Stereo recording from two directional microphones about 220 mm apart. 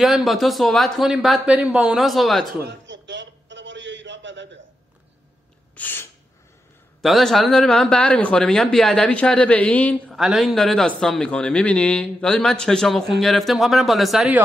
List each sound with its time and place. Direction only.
0.0 s a man's voice: centre (ahead or behind)
2.6 s a sound: 55° right (ahead or behind)
5.8 s gasp: 10° left (ahead or behind)
7.0 s a man's voice: centre (ahead or behind)